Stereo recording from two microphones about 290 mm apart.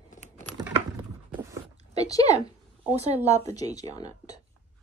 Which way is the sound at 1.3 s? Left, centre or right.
Centre.